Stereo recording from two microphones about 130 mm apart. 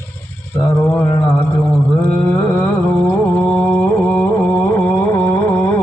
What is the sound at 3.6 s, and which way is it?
Carnatic music, 10° left (ahead or behind).